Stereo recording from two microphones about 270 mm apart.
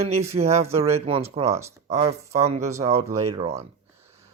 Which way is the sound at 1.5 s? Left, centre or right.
Centre.